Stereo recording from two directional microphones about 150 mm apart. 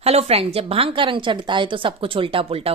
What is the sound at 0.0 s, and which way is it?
A woman's voice, 45° right (ahead or behind).